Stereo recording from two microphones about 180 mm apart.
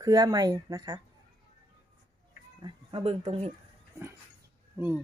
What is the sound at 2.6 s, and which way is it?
Speech, 30° right (ahead or behind).